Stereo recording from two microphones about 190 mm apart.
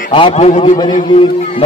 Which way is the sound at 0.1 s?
30° left (ahead or behind).